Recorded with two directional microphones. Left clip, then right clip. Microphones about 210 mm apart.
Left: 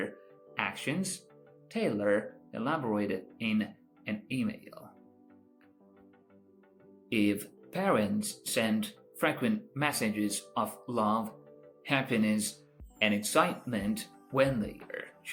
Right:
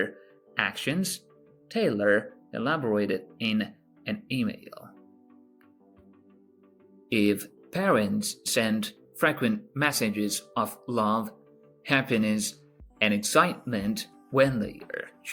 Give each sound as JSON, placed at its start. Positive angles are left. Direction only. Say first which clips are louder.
{"t": 0.5, "sound": "speech", "louder": "right 5 dB", "side_deg": -50}
{"t": 7.1, "sound": "speech", "louder": "right 5 dB", "side_deg": -50}
{"t": 14.9, "sound": "burping", "louder": "right 6 dB", "side_deg": -50}